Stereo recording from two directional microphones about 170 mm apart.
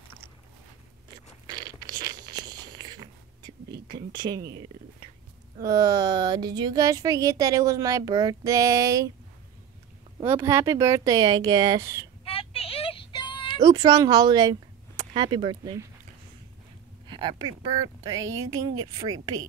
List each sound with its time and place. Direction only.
2.0 s a sound: 25° right (ahead or behind)
5.7 s speech: 20° right (ahead or behind)
10.2 s speech: 15° right (ahead or behind)
12.3 s child singing: 35° left (ahead or behind)
13.6 s speech: 25° right (ahead or behind)
17.1 s speech: 25° right (ahead or behind)